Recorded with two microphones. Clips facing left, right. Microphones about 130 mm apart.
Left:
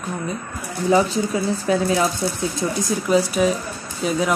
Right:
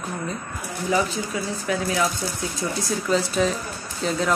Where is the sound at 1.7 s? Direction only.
30° left (ahead or behind).